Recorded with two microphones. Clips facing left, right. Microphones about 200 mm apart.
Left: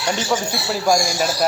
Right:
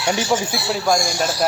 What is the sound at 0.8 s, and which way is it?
Speech, 10° left (ahead or behind).